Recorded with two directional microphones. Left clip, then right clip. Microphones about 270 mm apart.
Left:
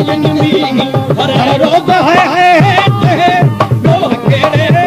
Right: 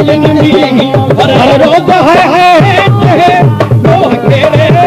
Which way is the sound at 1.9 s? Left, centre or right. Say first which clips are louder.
Right 3 dB; centre.